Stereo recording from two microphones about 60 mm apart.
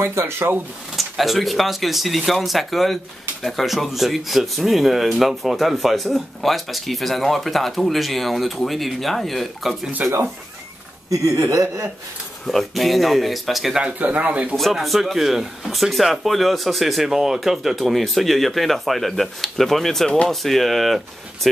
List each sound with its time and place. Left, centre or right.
0.0 s speech: right
0.9 s speech: centre
10.0 s speech: right
11.1 s speech: right
12.4 s speech: centre
13.9 s speech: right
14.5 s speech: centre